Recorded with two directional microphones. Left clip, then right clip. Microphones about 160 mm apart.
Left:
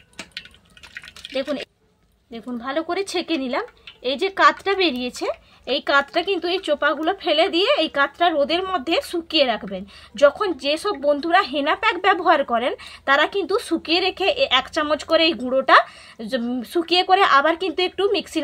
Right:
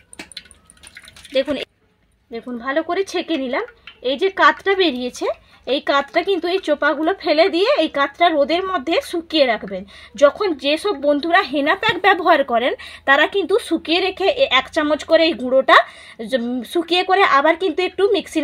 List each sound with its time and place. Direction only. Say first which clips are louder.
1.3 s speech: right 6 dB; 40° right (ahead or behind)